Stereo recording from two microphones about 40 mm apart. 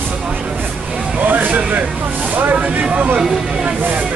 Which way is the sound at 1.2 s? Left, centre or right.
Right.